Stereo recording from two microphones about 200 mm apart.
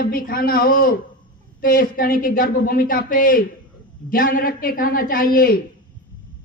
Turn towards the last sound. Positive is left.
turn(degrees=45)  # may be behind; listen again after turning